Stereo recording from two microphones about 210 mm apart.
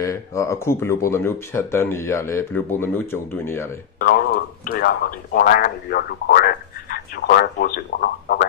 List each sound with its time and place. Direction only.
0.0 s speech: 15° left (ahead or behind)
4.0 s speech: 45° left (ahead or behind)